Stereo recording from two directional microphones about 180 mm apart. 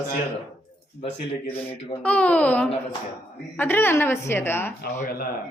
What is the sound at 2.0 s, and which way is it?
A woman's voice, 10° left (ahead or behind).